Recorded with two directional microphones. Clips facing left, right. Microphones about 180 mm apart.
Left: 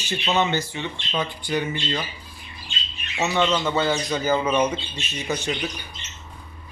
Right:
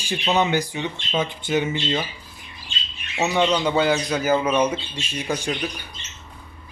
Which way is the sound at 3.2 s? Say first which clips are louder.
Right 2 dB; 10° right (ahead or behind).